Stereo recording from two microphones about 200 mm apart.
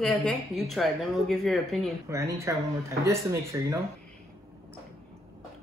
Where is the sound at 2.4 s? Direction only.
15° right (ahead or behind).